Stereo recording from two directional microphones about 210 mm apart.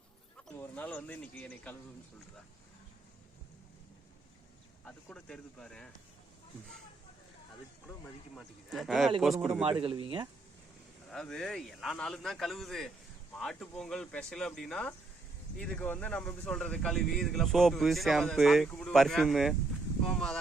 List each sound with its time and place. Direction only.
0.3 s speech: 5° left (ahead or behind)
4.9 s speech: 5° left (ahead or behind)
8.4 s speech: centre (ahead or behind)
9.8 s speech: 25° right (ahead or behind)
11.1 s speech: centre (ahead or behind)